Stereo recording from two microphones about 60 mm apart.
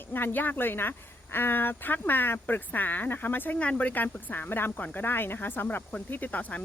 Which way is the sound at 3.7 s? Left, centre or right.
Left.